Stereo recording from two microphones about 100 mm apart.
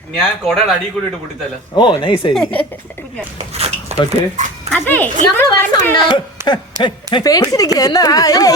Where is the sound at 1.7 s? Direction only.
50° left (ahead or behind).